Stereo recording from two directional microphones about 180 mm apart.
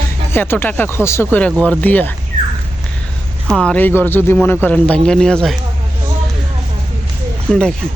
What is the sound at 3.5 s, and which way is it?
Speech, 5° left (ahead or behind).